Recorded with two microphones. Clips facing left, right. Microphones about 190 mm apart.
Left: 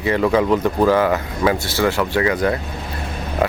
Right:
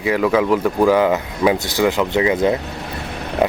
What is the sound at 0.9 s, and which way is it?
Speech, 15° right (ahead or behind).